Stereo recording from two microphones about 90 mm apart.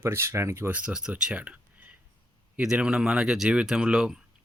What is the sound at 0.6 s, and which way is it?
Speech, 15° right (ahead or behind).